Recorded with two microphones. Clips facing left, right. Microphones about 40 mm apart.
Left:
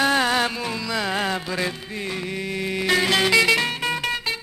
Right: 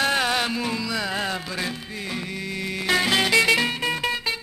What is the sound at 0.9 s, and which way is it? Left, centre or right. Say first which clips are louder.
Music: left 2 dB; centre.